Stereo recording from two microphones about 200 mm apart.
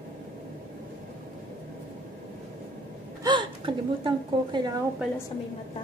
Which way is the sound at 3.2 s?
25° right (ahead or behind).